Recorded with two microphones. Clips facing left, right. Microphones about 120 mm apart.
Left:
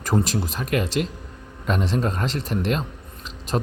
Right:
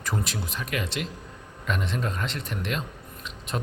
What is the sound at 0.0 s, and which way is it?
Speech, 40° left (ahead or behind).